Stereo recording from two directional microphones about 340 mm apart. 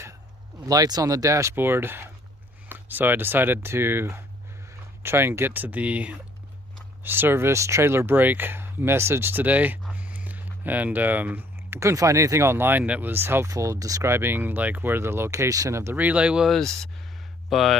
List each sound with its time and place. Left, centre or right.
0.6 s speech: centre